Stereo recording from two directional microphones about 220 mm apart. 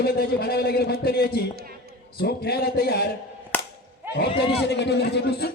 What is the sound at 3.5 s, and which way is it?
Cap gun, 10° left (ahead or behind).